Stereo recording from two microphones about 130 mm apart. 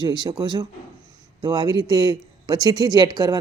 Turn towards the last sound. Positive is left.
turn(degrees=-30)  # may be behind; listen again after turning